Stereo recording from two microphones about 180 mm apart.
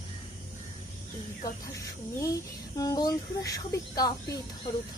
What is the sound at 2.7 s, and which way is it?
Speech, 20° left (ahead or behind).